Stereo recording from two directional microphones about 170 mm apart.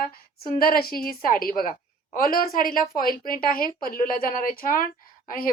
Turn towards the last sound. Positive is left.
turn(degrees=55)  # may be behind; listen again after turning